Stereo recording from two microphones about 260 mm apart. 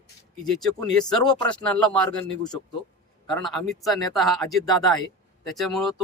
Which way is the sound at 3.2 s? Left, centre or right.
Centre.